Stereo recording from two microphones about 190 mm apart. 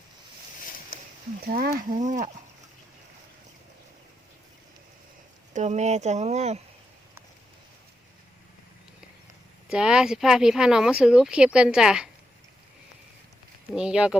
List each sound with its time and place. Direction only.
1.5 s speech: 50° right (ahead or behind)
5.5 s speech: 35° right (ahead or behind)
9.6 s speech: 5° right (ahead or behind)
13.7 s speech: 5° right (ahead or behind)